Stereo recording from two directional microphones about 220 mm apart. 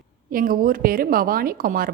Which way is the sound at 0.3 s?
40° right (ahead or behind).